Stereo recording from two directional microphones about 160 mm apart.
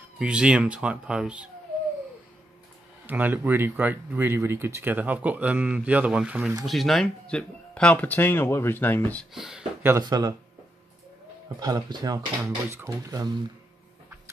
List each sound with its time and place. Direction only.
0.2 s speech: 5° right (ahead or behind)
3.1 s speech: 10° right (ahead or behind); by 9.3 s 10° left (ahead or behind)
9.3 s speech: 5° right (ahead or behind)
9.8 s speech: 20° right (ahead or behind)
11.6 s speech: 25° right (ahead or behind)